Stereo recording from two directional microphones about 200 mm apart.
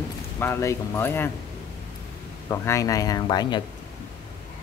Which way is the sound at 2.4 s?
15° left (ahead or behind).